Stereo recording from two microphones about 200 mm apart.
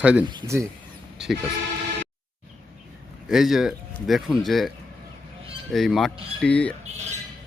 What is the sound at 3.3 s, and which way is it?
Speech, centre (ahead or behind).